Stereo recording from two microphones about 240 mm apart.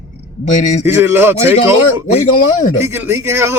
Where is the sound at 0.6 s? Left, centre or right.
Left.